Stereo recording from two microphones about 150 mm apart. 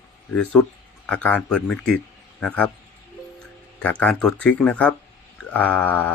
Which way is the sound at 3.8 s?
10° left (ahead or behind).